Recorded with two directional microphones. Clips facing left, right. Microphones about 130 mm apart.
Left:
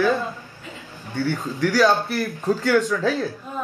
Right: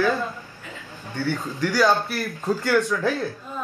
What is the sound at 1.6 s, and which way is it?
Speech, 15° right (ahead or behind).